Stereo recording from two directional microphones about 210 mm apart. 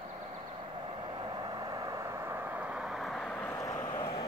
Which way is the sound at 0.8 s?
20° right (ahead or behind).